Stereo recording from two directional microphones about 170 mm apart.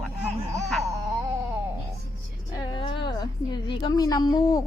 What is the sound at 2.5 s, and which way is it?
A woman's voice, 30° left (ahead or behind).